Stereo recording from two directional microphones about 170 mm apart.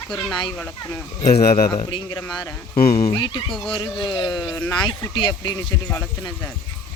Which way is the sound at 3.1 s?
30° left (ahead or behind).